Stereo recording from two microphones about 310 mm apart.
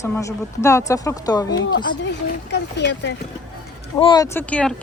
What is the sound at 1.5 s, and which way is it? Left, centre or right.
Speech, left.